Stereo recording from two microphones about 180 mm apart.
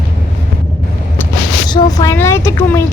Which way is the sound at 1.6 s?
20° left (ahead or behind).